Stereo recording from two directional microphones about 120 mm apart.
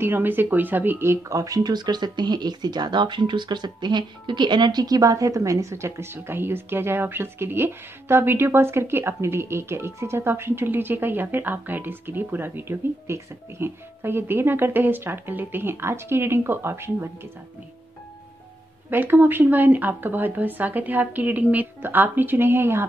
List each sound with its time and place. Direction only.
0.0 s speech: 15° right (ahead or behind)
18.9 s speech: 15° right (ahead or behind)